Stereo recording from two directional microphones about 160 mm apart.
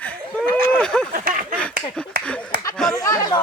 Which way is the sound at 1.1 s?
60° right (ahead or behind).